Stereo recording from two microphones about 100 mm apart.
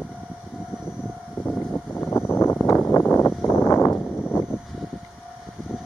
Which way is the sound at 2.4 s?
25° left (ahead or behind).